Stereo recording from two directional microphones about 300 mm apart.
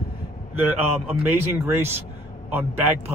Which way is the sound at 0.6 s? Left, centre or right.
Centre.